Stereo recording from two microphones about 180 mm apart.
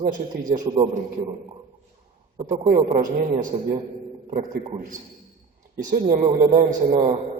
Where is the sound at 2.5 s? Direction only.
45° right (ahead or behind).